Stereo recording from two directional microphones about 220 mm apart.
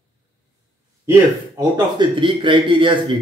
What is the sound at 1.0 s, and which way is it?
A man's voice, 15° right (ahead or behind).